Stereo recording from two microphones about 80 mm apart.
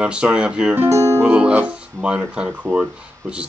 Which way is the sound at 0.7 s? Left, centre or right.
Right.